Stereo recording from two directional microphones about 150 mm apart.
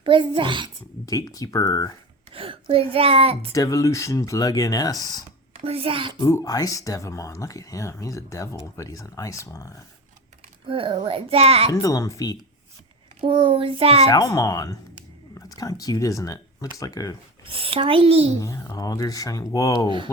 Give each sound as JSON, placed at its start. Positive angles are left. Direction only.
{"t": 0.0, "sound": "a child's voice", "side_deg": -35}
{"t": 1.0, "sound": "speech", "side_deg": 25}
{"t": 2.3, "sound": "a child's voice", "side_deg": -35}
{"t": 3.5, "sound": "speech", "side_deg": 20}
{"t": 5.5, "sound": "a child's voice", "side_deg": -40}
{"t": 6.1, "sound": "speech", "side_deg": 20}
{"t": 10.7, "sound": "a child's voice", "side_deg": -35}
{"t": 11.7, "sound": "speech", "side_deg": 20}
{"t": 13.2, "sound": "a child's voice", "side_deg": -35}
{"t": 14.1, "sound": "speech", "side_deg": 20}
{"t": 17.4, "sound": "a child's voice", "side_deg": -40}
{"t": 18.3, "sound": "speech", "side_deg": 20}